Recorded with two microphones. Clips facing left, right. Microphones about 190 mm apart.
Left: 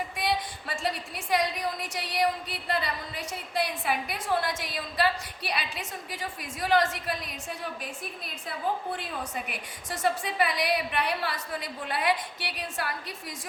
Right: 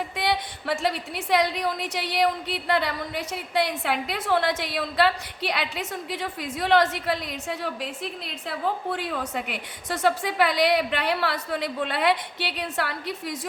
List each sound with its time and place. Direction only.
0.2 s a woman's voice: 70° right (ahead or behind)